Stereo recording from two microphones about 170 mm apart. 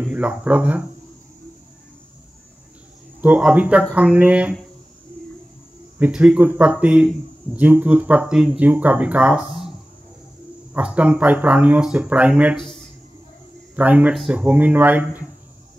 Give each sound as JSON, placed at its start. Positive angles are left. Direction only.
{"t": 0.0, "sound": "speech", "side_deg": -5}
{"t": 3.2, "sound": "speech", "side_deg": -5}
{"t": 5.9, "sound": "speech", "side_deg": -5}
{"t": 10.7, "sound": "speech", "side_deg": -5}
{"t": 12.5, "sound": "speech", "side_deg": 0}
{"t": 13.7, "sound": "speech", "side_deg": -10}